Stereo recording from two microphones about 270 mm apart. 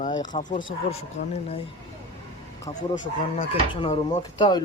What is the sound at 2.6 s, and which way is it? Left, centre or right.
Speech, centre.